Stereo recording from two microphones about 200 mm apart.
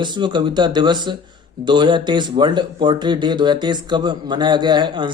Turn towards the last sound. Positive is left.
turn(degrees=-25)  # may be behind; listen again after turning